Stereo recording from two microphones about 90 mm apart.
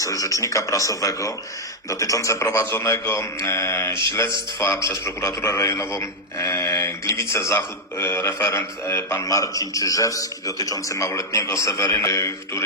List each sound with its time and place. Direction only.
0.0 s a man's voice: 40° left (ahead or behind)